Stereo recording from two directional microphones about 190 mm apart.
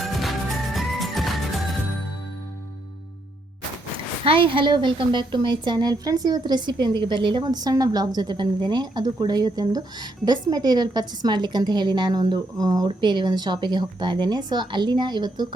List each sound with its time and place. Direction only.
0.0 s music: centre (ahead or behind)
3.9 s a woman's voice: 25° right (ahead or behind)